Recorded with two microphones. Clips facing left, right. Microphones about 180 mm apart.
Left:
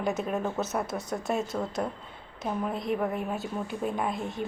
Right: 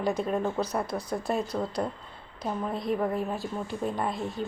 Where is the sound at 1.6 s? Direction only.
10° right (ahead or behind).